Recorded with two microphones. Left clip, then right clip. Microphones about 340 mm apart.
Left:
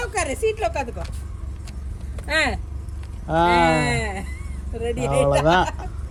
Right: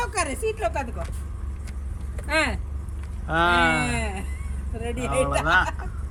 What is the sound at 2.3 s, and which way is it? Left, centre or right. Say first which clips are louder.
Speech: left 2 dB; centre.